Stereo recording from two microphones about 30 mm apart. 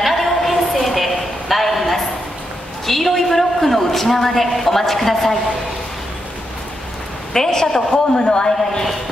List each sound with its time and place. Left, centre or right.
0.0 s a sound: centre
2.9 s a man's voice: centre
7.3 s a woman's voice: centre; by 8.8 s left